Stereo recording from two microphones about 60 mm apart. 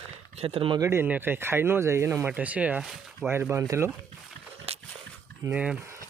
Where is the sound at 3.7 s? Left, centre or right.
Right.